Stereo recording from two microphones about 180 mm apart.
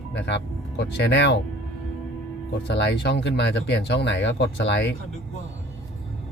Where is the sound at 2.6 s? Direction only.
70° left (ahead or behind).